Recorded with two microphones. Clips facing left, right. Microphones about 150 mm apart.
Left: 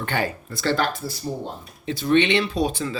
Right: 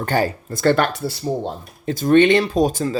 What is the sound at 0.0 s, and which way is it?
Speech, 40° right (ahead or behind).